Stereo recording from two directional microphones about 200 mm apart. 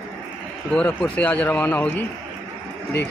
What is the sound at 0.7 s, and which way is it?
Speech, 5° left (ahead or behind).